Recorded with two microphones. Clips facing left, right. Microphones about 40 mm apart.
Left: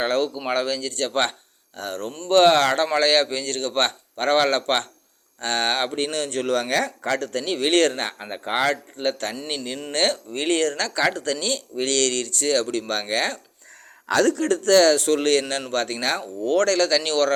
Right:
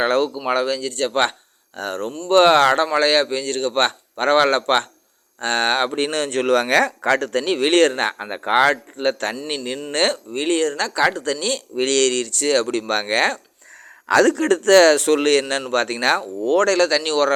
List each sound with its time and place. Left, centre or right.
0.0 s speech: right
0.4 s speech: centre
1.7 s speech: right
2.3 s speech: centre
6.1 s speech: right
7.5 s speech: right
10.3 s speech: centre
11.2 s speech: right
11.5 s a man's voice: right
16.4 s speech: centre
17.0 s speech: centre